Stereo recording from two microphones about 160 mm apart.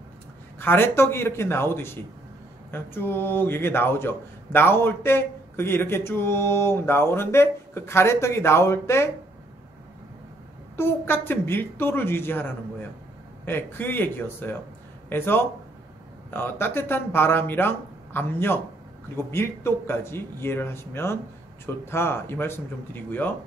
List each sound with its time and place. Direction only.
0.6 s a man's voice: 15° left (ahead or behind)
10.8 s a man's voice: 15° left (ahead or behind)